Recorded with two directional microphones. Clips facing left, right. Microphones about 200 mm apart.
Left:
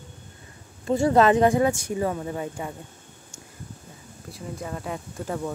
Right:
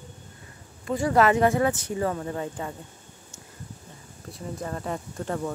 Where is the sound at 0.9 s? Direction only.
25° left (ahead or behind).